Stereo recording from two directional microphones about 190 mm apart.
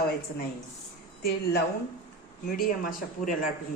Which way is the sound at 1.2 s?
55° left (ahead or behind).